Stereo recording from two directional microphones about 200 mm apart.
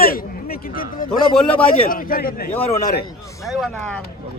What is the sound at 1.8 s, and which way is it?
Speech, 45° left (ahead or behind).